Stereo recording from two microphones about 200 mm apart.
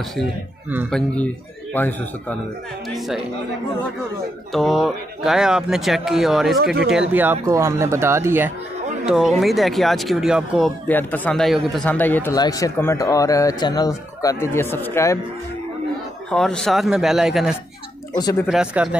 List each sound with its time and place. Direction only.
0.1 s speech: 5° right (ahead or behind)
4.5 s speech: centre (ahead or behind)
6.6 s speech: 55° right (ahead or behind)
6.9 s speech: 5° right (ahead or behind)
10.9 s speech: 10° left (ahead or behind)
16.3 s speech: 5° left (ahead or behind)
18.1 s speech: 20° left (ahead or behind)
18.5 s speech: 5° right (ahead or behind)